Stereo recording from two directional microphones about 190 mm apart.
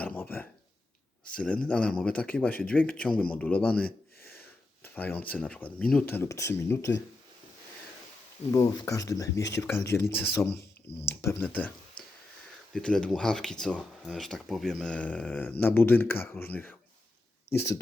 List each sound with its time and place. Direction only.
0.0 s a sound: 10° left (ahead or behind)
1.2 s speech: 5° left (ahead or behind)
4.8 s a sound: 10° left (ahead or behind)
5.3 s speech: 5° left (ahead or behind)
8.5 s speech: 15° left (ahead or behind)
10.9 s speech: 60° left (ahead or behind)
11.2 s speech: 10° left (ahead or behind)
12.7 s speech: 5° left (ahead or behind)